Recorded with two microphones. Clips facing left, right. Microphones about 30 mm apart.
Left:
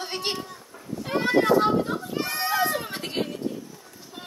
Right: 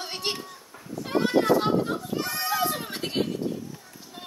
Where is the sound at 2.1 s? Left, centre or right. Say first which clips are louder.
Left 4 dB; centre.